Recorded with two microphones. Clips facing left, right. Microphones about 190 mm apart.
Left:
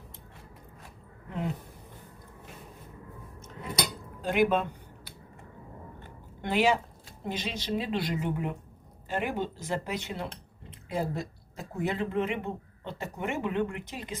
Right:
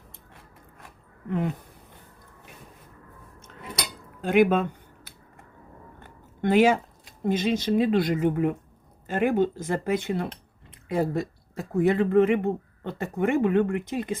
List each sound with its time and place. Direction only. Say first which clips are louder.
4.2 s speech: right 5 dB; 55° right (ahead or behind)
6.4 s speech: right 6 dB; 50° right (ahead or behind)